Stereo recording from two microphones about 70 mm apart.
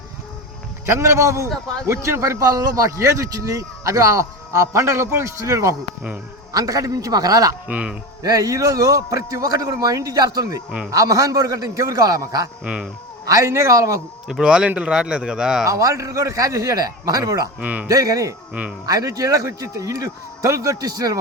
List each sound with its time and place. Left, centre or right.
0.9 s a man's voice: right
7.7 s speech: centre
8.2 s a man's voice: right
12.6 s speech: centre
13.2 s speech: right
14.3 s speech: centre
15.6 s speech: right
17.6 s speech: right
17.8 s speech: right